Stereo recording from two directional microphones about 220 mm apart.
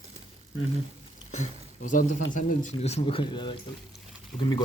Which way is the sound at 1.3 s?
35° left (ahead or behind).